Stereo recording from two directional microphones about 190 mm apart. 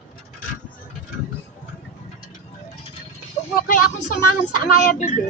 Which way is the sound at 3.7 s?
45° left (ahead or behind).